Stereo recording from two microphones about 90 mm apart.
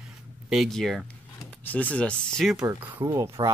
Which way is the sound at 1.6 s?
20° left (ahead or behind).